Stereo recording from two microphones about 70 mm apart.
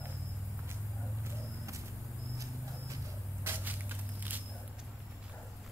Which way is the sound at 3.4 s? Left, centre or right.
Right.